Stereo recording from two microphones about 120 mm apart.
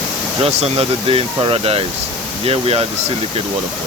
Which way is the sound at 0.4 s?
55° right (ahead or behind).